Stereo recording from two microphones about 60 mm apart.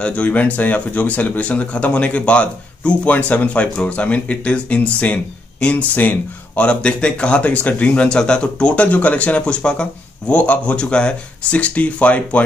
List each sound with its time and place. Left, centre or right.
0.0 s speech: left